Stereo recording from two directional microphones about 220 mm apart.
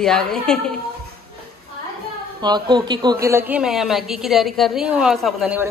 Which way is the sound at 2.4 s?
20° right (ahead or behind).